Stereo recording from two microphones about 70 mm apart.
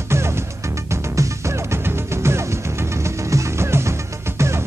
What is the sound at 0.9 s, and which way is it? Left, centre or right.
Music, right.